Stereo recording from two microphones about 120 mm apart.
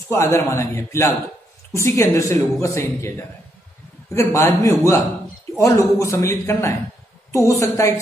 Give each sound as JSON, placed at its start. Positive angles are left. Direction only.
{"t": 0.1, "sound": "speech", "side_deg": 25}